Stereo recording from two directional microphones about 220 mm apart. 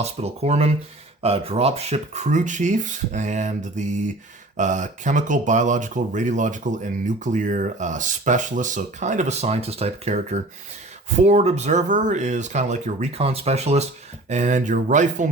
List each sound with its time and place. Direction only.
0.0 s speech: 30° right (ahead or behind)